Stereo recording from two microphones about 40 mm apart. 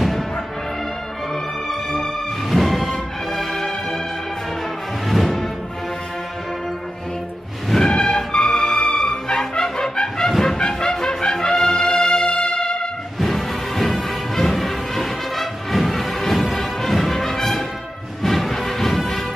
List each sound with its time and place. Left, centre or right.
1.3 s music: centre
2.5 s music: centre
5.0 s music: centre
7.7 s music: centre
11.5 s brass instrument: centre
12.1 s music: left
13.2 s music: centre